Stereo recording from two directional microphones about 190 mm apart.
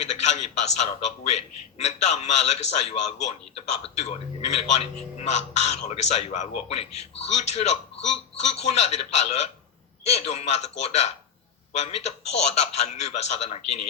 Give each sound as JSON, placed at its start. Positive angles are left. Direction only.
{"t": 0.0, "sound": "a man's voice", "side_deg": 35}